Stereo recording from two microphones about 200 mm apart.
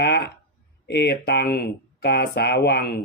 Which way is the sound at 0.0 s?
55° left (ahead or behind).